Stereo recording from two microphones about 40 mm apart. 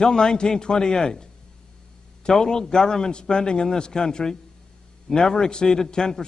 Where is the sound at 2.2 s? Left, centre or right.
Centre.